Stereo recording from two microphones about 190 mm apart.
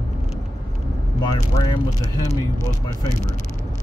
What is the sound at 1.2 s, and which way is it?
Speech, 20° left (ahead or behind).